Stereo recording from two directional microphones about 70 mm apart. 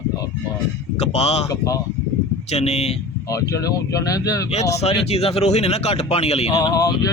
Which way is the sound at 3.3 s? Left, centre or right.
Left.